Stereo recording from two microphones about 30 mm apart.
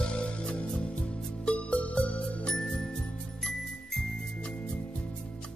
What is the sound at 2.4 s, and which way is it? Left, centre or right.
Music, left.